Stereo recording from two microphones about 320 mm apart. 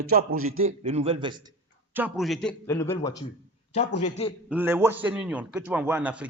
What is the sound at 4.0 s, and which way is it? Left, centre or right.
Speech, centre.